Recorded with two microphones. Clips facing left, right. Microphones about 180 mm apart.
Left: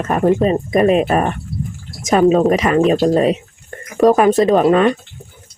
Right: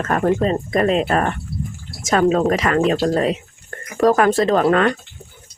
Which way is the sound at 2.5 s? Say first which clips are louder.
Left 4 dB; 20° left (ahead or behind).